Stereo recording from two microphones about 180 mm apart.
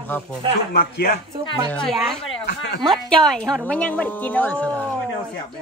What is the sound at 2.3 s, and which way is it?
Speech, 65° left (ahead or behind).